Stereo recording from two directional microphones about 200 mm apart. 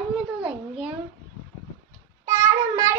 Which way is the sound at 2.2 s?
15° right (ahead or behind).